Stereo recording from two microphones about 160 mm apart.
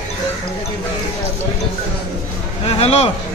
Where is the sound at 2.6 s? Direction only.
40° left (ahead or behind).